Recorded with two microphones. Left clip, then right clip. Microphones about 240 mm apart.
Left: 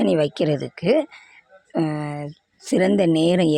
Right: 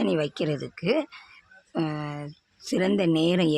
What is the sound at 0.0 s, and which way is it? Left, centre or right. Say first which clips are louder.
Speech: left 7 dB; left.